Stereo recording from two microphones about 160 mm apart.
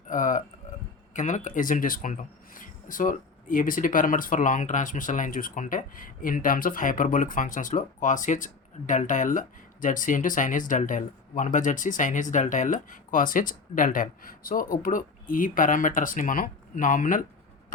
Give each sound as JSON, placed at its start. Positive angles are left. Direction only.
{"t": 0.1, "sound": "speech", "side_deg": 55}